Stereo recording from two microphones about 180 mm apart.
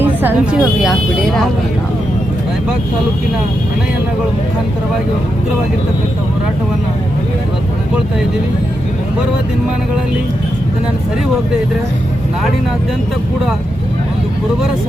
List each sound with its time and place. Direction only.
0.0 s speech: 10° right (ahead or behind)